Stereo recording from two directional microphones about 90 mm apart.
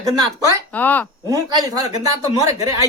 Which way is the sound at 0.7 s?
20° left (ahead or behind).